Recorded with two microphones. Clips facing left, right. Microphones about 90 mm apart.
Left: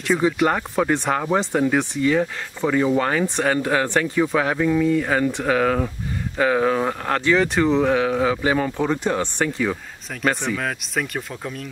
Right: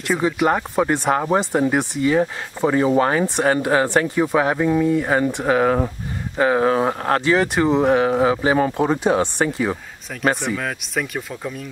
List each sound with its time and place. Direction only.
0.0 s speech: 5° right (ahead or behind)